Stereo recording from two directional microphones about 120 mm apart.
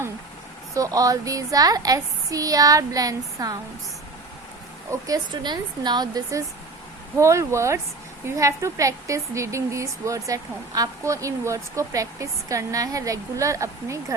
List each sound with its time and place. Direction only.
0.7 s a woman's voice: 30° right (ahead or behind)
4.9 s a woman's voice: 30° right (ahead or behind)